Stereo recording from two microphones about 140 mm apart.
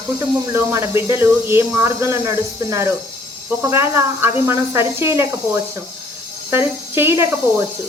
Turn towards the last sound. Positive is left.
turn(degrees=-20)  # may be behind; listen again after turning